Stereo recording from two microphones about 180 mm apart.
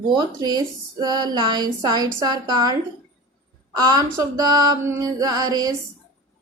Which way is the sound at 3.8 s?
20° right (ahead or behind).